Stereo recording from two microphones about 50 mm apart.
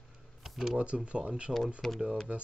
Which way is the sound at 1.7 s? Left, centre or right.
Centre.